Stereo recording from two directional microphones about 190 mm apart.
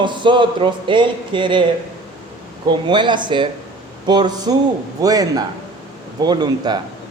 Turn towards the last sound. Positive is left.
turn(degrees=-20)  # may be behind; listen again after turning